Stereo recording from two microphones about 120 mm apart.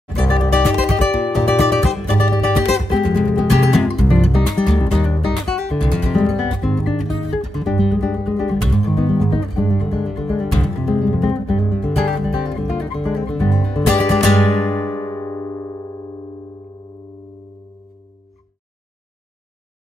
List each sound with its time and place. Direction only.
0.4 s music: centre (ahead or behind)
14.6 s music: 25° left (ahead or behind)
15.1 s keyboard: 15° left (ahead or behind)